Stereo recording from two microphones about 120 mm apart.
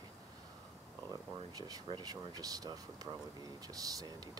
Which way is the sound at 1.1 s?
30° right (ahead or behind).